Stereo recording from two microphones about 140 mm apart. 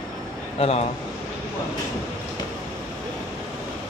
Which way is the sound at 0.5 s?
45° left (ahead or behind).